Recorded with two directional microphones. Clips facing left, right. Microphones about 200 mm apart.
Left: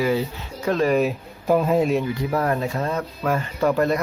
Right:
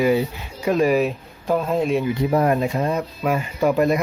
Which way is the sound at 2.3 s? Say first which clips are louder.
Right 4 dB; 20° right (ahead or behind).